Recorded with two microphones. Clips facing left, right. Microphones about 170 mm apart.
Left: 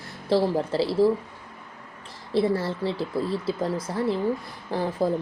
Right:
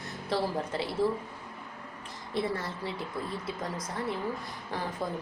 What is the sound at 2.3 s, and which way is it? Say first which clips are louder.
Speech: left 9 dB; 30° left (ahead or behind).